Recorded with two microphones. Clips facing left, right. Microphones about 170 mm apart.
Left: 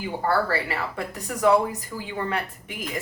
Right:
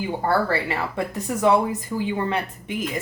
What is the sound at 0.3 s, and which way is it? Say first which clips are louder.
A woman's voice: right 1 dB; 25° right (ahead or behind).